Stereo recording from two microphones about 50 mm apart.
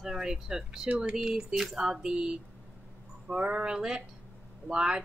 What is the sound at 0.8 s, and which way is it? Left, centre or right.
Speech, right.